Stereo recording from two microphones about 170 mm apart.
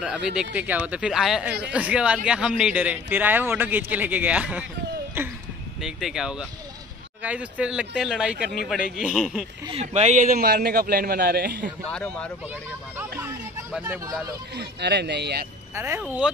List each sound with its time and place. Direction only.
0.6 s a man's voice: 10° right (ahead or behind)
5.8 s a man's voice: centre (ahead or behind)
9.7 s a man's voice: 40° right (ahead or behind); by 11.7 s 60° right (ahead or behind)
11.9 s a man's voice: 5° left (ahead or behind)
13.2 s a sound: 10° right (ahead or behind)
14.6 s speech: 80° right
15.7 s a man's voice: 15° right (ahead or behind)